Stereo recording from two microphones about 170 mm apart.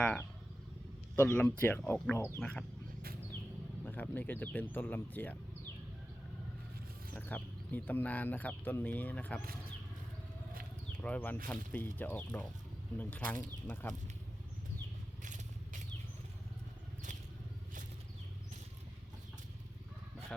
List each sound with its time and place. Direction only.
0.0 s speech: 10° left (ahead or behind)
3.8 s speech: 10° left (ahead or behind)
7.1 s speech: 10° left (ahead or behind)
11.0 s speech: 10° left (ahead or behind)
15.2 s vehicle: 45° right (ahead or behind)